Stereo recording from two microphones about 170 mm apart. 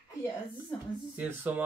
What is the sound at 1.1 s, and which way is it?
Speech, 10° right (ahead or behind).